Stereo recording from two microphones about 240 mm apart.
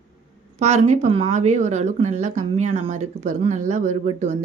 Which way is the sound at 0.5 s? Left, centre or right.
Right.